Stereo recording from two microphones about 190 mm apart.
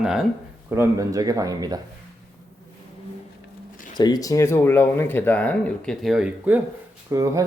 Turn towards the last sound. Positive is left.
turn(degrees=-15)  # may be behind; listen again after turning